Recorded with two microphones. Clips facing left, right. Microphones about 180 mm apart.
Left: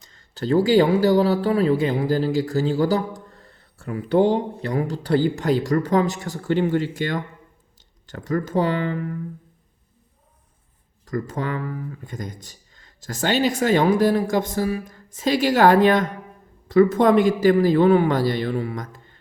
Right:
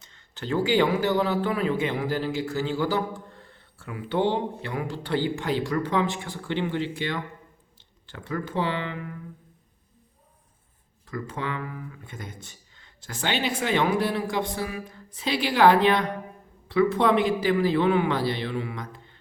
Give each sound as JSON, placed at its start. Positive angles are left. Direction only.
{"t": 0.0, "sound": "a man's voice", "side_deg": 35}
{"t": 11.0, "sound": "a man's voice", "side_deg": 40}